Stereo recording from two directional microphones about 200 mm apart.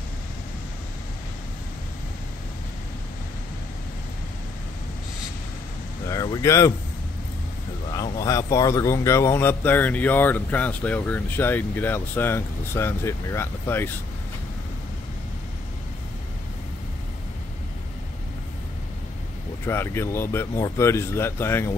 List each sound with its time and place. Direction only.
6.0 s speech: 15° left (ahead or behind)
7.9 s speech: 15° left (ahead or behind)
19.6 s speech: 10° left (ahead or behind)